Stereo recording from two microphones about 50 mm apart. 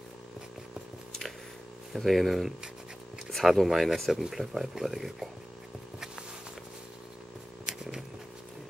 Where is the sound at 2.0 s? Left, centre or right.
Centre.